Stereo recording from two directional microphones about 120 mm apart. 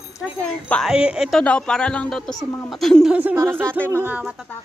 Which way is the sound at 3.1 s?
15° right (ahead or behind).